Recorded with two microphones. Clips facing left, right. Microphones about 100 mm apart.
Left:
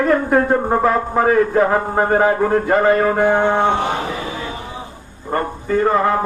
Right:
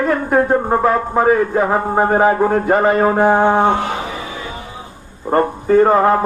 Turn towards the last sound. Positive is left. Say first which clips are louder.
# right 4 dB
turn(degrees=-40)  # may be behind; listen again after turning